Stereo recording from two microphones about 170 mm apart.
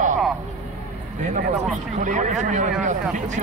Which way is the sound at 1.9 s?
45° right (ahead or behind).